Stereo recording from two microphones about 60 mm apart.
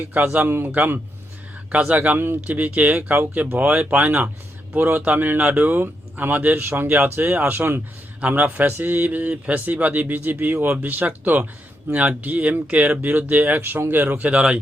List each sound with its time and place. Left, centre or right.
0.0 s speech: right
0.4 s speech: right
2.1 s speech: right
2.6 s speech: right